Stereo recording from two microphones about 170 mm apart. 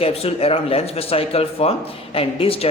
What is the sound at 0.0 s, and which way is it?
A man's voice, 35° left (ahead or behind).